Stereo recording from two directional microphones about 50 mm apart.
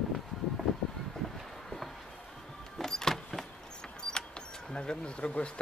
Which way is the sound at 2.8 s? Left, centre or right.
Centre.